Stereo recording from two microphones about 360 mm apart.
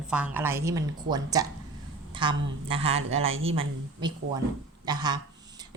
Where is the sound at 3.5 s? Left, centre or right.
Centre.